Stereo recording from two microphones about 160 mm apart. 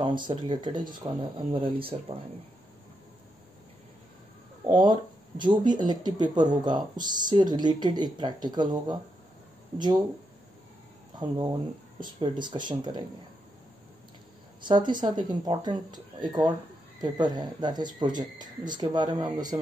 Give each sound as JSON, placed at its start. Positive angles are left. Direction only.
{"t": 0.0, "sound": "speech", "side_deg": -30}
{"t": 4.6, "sound": "a sound", "side_deg": -30}
{"t": 5.4, "sound": "speech", "side_deg": -30}
{"t": 11.1, "sound": "speech", "side_deg": -25}
{"t": 14.6, "sound": "speech", "side_deg": -30}